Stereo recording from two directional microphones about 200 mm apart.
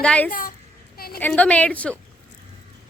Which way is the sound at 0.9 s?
50° left (ahead or behind).